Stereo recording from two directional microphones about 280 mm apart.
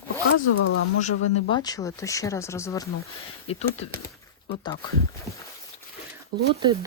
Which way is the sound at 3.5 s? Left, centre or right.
Left.